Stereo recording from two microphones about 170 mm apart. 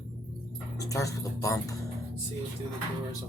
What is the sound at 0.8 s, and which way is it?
Speech, 20° left (ahead or behind).